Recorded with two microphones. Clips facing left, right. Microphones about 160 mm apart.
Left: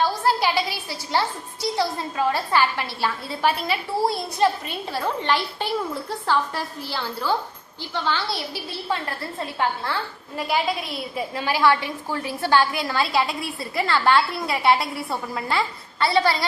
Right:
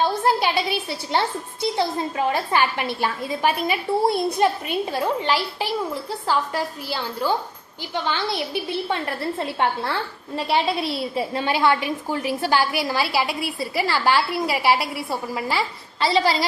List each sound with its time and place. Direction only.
0.0 s a woman's voice: 20° right (ahead or behind)